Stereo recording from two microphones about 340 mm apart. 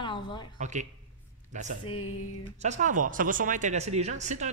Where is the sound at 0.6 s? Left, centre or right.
Right.